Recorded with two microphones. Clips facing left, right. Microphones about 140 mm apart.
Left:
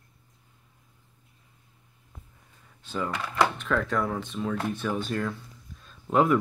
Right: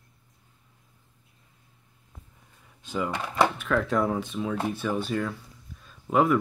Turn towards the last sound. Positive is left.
turn(degrees=-5)  # may be behind; listen again after turning